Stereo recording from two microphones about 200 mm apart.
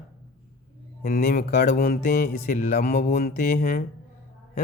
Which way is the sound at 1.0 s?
45° left (ahead or behind).